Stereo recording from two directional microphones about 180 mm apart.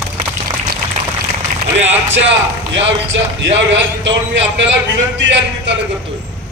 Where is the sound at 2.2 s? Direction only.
90° right.